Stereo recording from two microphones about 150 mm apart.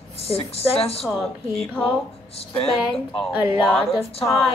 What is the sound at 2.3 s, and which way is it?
Speech, 40° left (ahead or behind).